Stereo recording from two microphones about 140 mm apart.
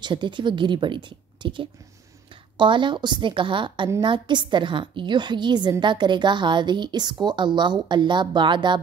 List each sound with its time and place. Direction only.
0.0 s a woman's voice: 35° right (ahead or behind)